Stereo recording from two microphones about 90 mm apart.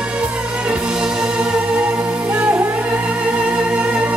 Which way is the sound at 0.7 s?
10° right (ahead or behind).